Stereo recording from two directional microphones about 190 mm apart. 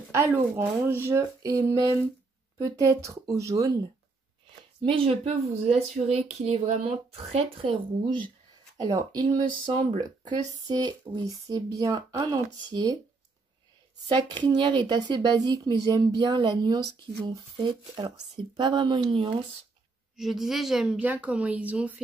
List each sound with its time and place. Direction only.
0.1 s speech: 15° right (ahead or behind)
4.8 s speech: 30° right (ahead or behind)
14.0 s speech: 25° right (ahead or behind)
20.2 s a woman's voice: centre (ahead or behind)